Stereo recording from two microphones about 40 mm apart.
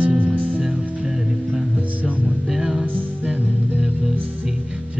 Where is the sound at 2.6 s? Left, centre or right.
Centre.